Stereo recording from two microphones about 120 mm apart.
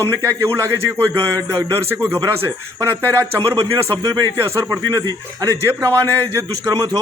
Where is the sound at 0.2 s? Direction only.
25° right (ahead or behind).